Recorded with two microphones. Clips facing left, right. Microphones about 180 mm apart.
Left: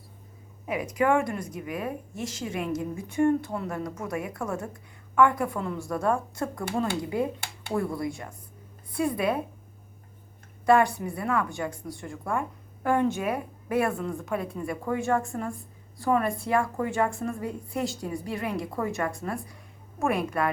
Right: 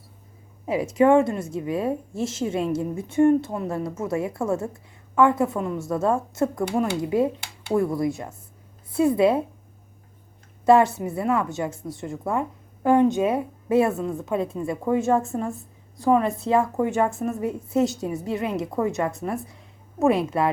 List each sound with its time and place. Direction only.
0.6 s a woman's voice: 25° right (ahead or behind)
10.7 s a woman's voice: 25° right (ahead or behind)